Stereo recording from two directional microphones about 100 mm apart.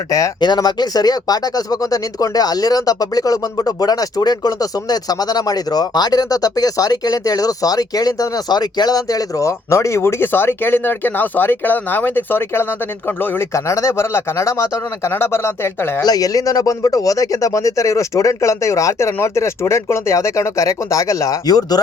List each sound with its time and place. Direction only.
0.3 s speech: 45° left (ahead or behind); by 16.0 s 25° left (ahead or behind)
16.0 s speech: 35° left (ahead or behind)